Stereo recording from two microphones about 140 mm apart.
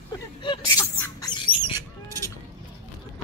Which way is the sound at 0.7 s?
20° left (ahead or behind).